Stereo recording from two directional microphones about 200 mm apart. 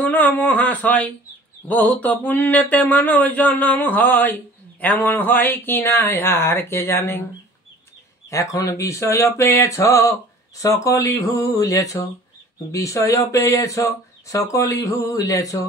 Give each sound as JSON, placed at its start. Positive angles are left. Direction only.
{"t": 0.0, "sound": "speech", "side_deg": 10}
{"t": 8.3, "sound": "speech", "side_deg": 15}